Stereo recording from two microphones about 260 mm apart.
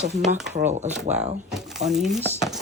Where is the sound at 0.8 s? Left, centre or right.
Right.